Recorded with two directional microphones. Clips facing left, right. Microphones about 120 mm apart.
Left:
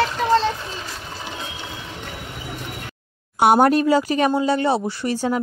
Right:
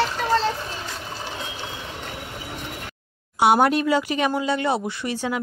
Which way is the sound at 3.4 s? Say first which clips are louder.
Left 3 dB; 45° left (ahead or behind).